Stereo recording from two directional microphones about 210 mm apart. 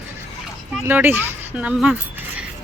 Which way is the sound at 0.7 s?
10° right (ahead or behind).